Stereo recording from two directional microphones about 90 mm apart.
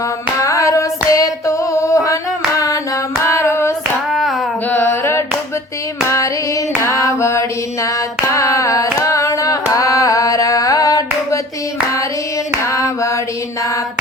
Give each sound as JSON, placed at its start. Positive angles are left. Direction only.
{"t": 0.3, "sound": "female singing", "side_deg": 35}
{"t": 2.6, "sound": "hands", "side_deg": 40}
{"t": 4.1, "sound": "hands", "side_deg": 0}
{"t": 4.7, "sound": "singing", "side_deg": 25}
{"t": 6.1, "sound": "female singing", "side_deg": 35}
{"t": 12.6, "sound": "a sound", "side_deg": 35}